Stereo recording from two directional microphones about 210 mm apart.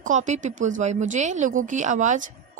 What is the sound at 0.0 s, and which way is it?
Speech, 35° right (ahead or behind).